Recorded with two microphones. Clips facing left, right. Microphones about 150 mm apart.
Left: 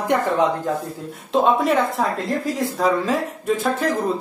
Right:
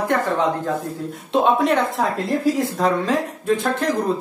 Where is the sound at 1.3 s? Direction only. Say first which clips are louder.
Even; centre (ahead or behind).